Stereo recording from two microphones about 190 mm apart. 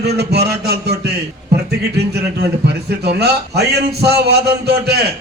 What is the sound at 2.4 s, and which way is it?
A man's voice, 60° right (ahead or behind).